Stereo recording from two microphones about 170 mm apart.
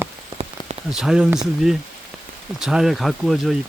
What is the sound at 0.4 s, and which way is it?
Rain on surface, 35° right (ahead or behind).